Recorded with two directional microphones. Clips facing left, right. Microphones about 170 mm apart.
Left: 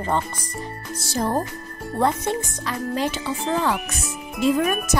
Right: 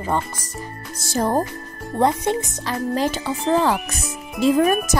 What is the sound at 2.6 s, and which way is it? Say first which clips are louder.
Music: right 3 dB; 40° right (ahead or behind).